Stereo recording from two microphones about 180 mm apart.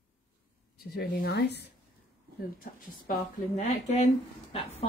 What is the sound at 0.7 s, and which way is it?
Speech, 60° left (ahead or behind).